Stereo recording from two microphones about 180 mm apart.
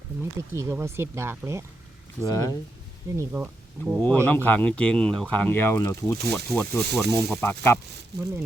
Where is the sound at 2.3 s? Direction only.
20° left (ahead or behind).